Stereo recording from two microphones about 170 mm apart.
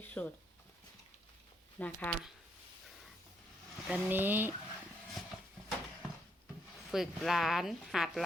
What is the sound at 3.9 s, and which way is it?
Speech, 5° right (ahead or behind).